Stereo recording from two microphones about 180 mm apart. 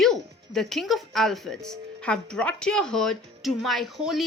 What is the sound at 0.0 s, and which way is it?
Speech, centre (ahead or behind).